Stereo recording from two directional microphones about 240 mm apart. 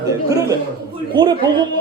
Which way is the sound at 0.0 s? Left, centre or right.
Centre.